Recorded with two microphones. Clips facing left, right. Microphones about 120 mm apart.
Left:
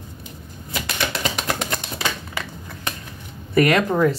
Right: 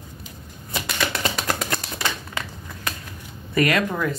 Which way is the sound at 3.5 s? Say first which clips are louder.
Left 4 dB; 25° left (ahead or behind).